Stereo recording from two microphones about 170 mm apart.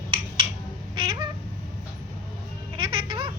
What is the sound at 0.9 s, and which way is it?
Cat, 30° right (ahead or behind).